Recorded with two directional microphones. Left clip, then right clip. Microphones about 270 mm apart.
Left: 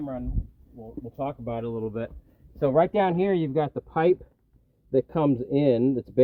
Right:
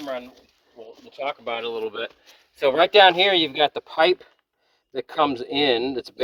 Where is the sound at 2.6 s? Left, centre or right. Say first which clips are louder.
Right 6 dB; right.